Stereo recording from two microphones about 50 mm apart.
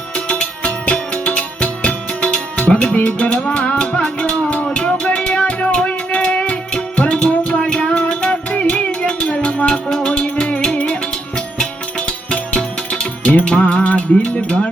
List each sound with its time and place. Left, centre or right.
0.3 s music: left
2.9 s music: left